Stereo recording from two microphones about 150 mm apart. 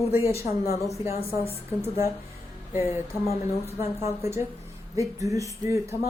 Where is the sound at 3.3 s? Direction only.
45° left (ahead or behind).